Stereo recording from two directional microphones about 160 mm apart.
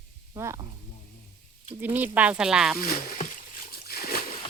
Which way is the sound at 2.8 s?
65° left (ahead or behind).